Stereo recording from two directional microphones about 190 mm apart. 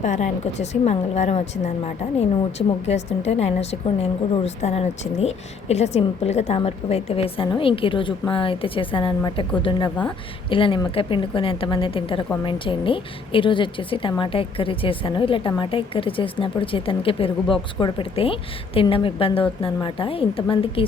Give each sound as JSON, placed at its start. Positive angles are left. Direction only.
{"t": 0.0, "sound": "a woman's voice", "side_deg": 40}